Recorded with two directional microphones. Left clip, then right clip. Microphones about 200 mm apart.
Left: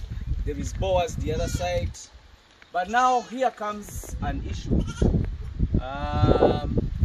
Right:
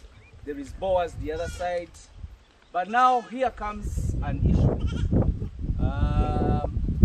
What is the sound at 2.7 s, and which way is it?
Speech, 50° left (ahead or behind).